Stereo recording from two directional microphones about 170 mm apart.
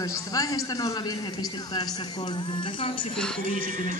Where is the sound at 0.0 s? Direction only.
20° left (ahead or behind).